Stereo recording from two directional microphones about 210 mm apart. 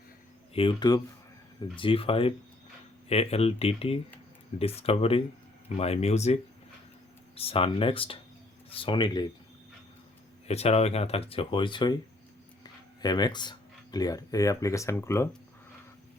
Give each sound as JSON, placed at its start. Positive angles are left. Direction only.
{"t": 0.5, "sound": "speech", "side_deg": 25}
{"t": 10.5, "sound": "speech", "side_deg": 30}
{"t": 13.0, "sound": "speech", "side_deg": 20}